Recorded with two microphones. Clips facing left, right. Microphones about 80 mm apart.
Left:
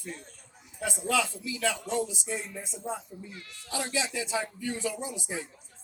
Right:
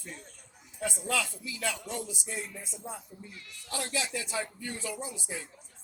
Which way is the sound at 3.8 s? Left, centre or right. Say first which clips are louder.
Left 3 dB; left.